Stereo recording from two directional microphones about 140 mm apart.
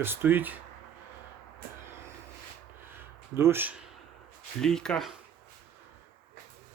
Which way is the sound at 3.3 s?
15° right (ahead or behind).